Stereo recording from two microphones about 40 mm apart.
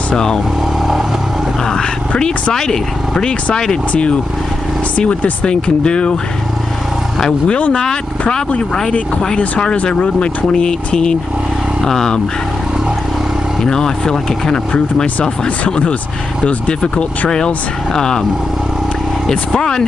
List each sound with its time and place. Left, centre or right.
0.1 s speech: centre
1.6 s speech: centre
4.9 s speech: left
5.5 s speech: left
7.4 s speech: left
9.8 s speech: left
11.8 s speech: centre
13.7 s speech: centre
15.4 s speech: left
17.9 s speech: centre
19.6 s speech: centre